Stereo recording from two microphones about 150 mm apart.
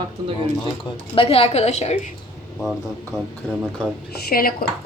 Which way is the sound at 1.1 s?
40° left (ahead or behind).